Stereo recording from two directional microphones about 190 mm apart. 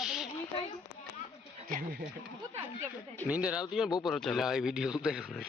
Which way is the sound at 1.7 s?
50° right (ahead or behind).